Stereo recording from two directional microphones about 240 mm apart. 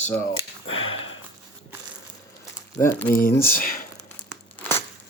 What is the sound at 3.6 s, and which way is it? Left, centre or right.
Speech, left.